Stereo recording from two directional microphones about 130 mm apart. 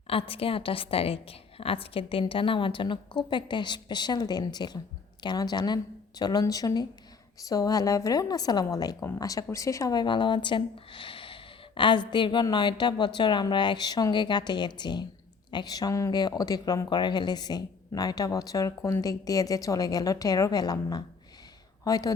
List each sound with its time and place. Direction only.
0.1 s a woman's voice: 45° left (ahead or behind); by 22.1 s 25° left (ahead or behind)